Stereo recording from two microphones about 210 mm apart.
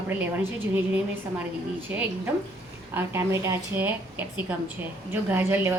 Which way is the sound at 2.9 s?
10° right (ahead or behind).